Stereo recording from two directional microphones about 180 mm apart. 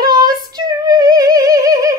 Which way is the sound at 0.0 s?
20° right (ahead or behind).